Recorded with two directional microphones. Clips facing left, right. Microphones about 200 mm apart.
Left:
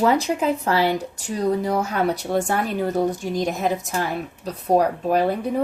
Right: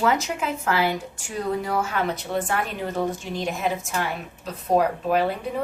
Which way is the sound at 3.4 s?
40° left (ahead or behind).